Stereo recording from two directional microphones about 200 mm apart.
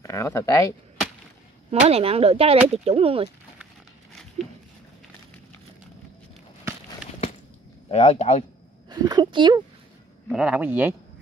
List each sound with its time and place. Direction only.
0.0 s speech: 15° left (ahead or behind)
1.7 s speech: 30° right (ahead or behind)
4.1 s a sound: centre (ahead or behind)
7.9 s speech: 30° left (ahead or behind)
8.8 s speech: 20° right (ahead or behind)
10.2 s speech: 5° right (ahead or behind)